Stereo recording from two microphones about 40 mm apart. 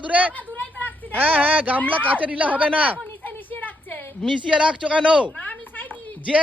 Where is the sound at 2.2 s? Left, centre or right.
Right.